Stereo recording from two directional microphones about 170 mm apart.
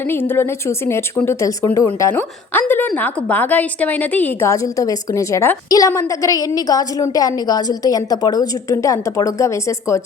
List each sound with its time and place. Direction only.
0.1 s speech: 15° left (ahead or behind)